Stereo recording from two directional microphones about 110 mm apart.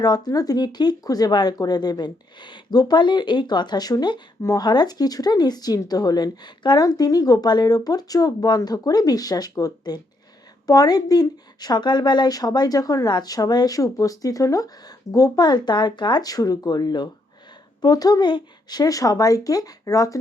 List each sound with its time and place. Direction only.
0.0 s speech: 40° left (ahead or behind)